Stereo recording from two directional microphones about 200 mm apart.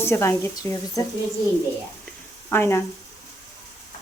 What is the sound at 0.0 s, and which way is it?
Speech, 15° left (ahead or behind).